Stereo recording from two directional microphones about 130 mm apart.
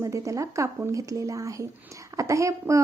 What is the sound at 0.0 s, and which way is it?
A woman's voice, 25° right (ahead or behind).